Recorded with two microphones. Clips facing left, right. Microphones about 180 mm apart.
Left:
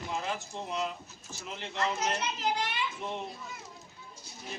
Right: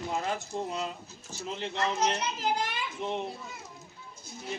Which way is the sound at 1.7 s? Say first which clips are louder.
Right 2 dB; 30° right (ahead or behind).